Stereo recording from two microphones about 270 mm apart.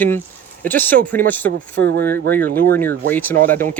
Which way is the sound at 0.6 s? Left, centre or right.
Centre.